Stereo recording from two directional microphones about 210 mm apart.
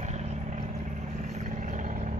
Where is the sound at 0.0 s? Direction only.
35° right (ahead or behind).